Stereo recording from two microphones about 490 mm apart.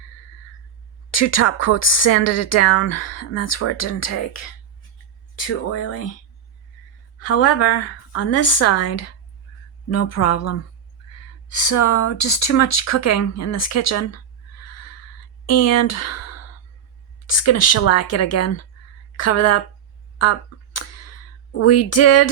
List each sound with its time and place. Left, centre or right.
1.1 s speech: left
5.5 s a woman's voice: left
7.2 s a woman's voice: left
15.4 s speech: left
20.1 s a sound: left
21.5 s a woman's voice: left